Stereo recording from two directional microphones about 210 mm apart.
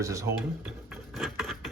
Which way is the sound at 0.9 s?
Centre (ahead or behind).